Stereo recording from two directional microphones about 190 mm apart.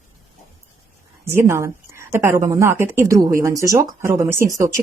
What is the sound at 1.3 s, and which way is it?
Speech, 15° right (ahead or behind).